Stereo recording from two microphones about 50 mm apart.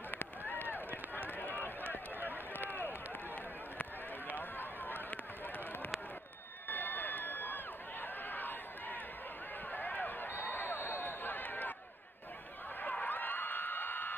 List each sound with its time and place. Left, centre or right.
0.1 s run: left
1.9 s run: right
2.5 s run: left
4.4 s run: left
6.7 s a sound: left
13.0 s crowd: left